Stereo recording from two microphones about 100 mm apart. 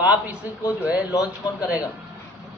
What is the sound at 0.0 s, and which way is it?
A man's voice, 15° right (ahead or behind).